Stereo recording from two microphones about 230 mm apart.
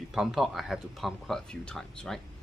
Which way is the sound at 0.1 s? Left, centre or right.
Centre.